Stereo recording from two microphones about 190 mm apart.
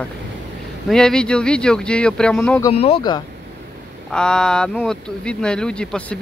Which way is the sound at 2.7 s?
35° left (ahead or behind).